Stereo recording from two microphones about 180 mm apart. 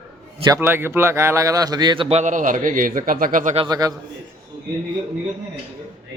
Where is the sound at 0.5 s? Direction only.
10° right (ahead or behind); by 3.5 s 50° right (ahead or behind).